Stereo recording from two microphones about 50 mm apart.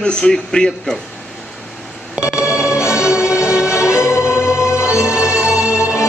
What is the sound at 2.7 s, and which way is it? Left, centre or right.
Music, left.